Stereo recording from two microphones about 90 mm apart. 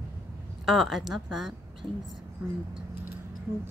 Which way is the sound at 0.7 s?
Centre (ahead or behind).